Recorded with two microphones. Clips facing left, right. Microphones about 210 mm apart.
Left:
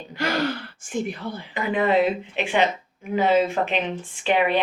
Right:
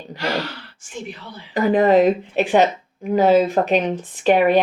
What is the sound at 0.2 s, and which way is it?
Speech, 50° left (ahead or behind).